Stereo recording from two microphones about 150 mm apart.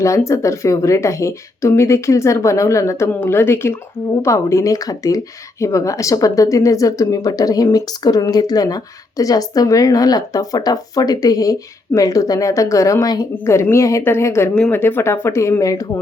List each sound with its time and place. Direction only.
0.0 s speech: 20° left (ahead or behind)